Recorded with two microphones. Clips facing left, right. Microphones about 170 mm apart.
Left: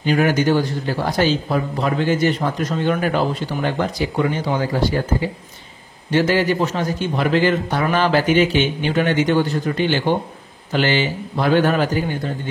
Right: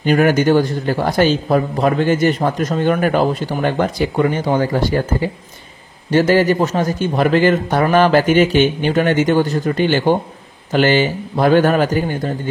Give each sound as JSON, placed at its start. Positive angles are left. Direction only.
{"t": 0.0, "sound": "a man's voice", "side_deg": -55}
{"t": 6.1, "sound": "a man's voice", "side_deg": -45}